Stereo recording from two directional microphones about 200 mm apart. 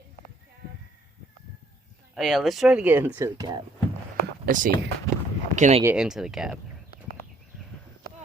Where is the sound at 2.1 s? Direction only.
Centre (ahead or behind); by 3.6 s 20° right (ahead or behind).